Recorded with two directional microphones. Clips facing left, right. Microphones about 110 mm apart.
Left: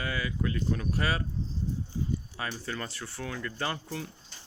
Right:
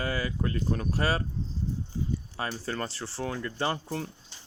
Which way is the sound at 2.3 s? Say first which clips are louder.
Right 3 dB; 35° right (ahead or behind).